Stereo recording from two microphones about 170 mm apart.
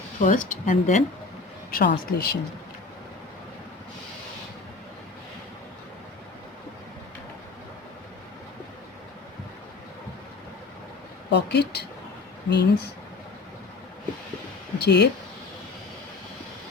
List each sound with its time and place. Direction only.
0.2 s speech: 50° left (ahead or behind)
1.7 s speech: 60° left (ahead or behind)
11.3 s speech: 85° left
14.8 s speech: 75° left (ahead or behind)